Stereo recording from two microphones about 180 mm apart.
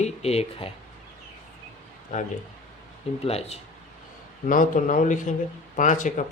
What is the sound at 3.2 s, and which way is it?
Speech, 35° left (ahead or behind).